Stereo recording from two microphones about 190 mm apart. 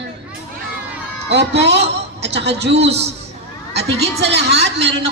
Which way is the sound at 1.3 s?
65° right (ahead or behind).